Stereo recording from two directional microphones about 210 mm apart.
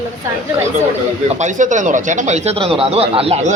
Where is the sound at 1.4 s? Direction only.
35° right (ahead or behind).